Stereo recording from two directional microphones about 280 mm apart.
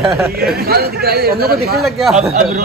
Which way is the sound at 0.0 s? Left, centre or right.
Centre.